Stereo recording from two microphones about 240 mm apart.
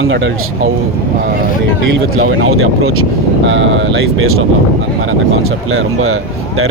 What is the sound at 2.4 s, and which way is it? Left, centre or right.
Speech, right.